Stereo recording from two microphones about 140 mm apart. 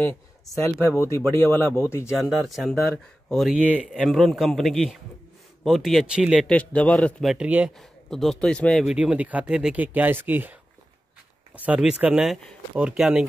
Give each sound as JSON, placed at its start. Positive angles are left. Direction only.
{"t": 0.1, "sound": "speech", "side_deg": 15}
{"t": 2.0, "sound": "speech", "side_deg": 0}
{"t": 3.5, "sound": "speech", "side_deg": -10}
{"t": 6.5, "sound": "speech", "side_deg": 10}
{"t": 7.2, "sound": "speech", "side_deg": -5}
{"t": 8.8, "sound": "speech", "side_deg": -5}